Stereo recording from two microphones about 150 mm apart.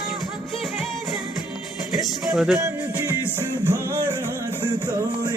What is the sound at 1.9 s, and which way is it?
Music, 5° right (ahead or behind).